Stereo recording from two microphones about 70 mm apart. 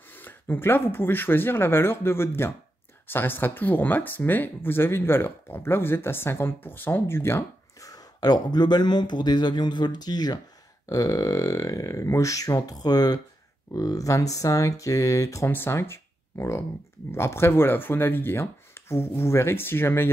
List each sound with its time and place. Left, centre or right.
0.1 s speech: left
7.8 s speech: left
10.9 s speech: left
13.7 s speech: left
15.4 s speech: left